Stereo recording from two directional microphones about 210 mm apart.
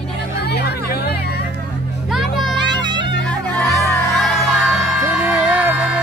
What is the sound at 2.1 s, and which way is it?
Music, centre (ahead or behind).